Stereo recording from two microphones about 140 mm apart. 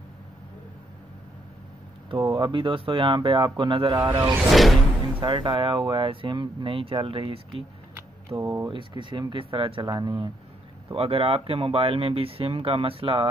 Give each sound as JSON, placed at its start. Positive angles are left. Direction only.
{"t": 2.0, "sound": "speech", "side_deg": -30}
{"t": 4.5, "sound": "music", "side_deg": 0}
{"t": 5.2, "sound": "speech", "side_deg": -35}
{"t": 8.4, "sound": "speech", "side_deg": -20}
{"t": 8.6, "sound": "speech", "side_deg": -35}
{"t": 10.9, "sound": "speech", "side_deg": -45}